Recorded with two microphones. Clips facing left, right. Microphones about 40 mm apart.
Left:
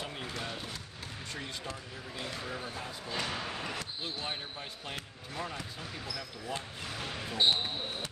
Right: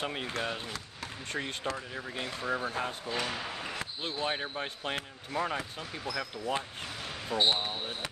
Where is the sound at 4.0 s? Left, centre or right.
Right.